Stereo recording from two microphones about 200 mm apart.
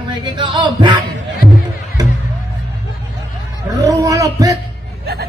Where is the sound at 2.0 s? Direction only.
20° right (ahead or behind).